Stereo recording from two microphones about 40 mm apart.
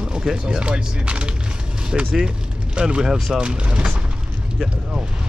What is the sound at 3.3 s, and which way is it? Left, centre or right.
Speech, right.